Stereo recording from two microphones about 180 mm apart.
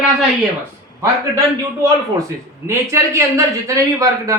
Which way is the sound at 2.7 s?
15° right (ahead or behind).